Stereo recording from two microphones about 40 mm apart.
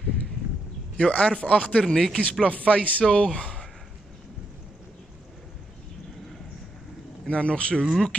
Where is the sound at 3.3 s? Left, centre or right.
Centre.